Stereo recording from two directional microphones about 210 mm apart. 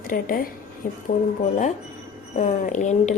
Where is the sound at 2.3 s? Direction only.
35° left (ahead or behind).